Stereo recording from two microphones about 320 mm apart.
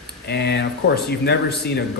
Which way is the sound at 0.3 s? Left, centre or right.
Left.